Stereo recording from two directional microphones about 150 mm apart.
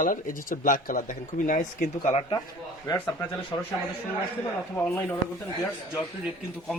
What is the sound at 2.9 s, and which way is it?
Speech, 30° left (ahead or behind).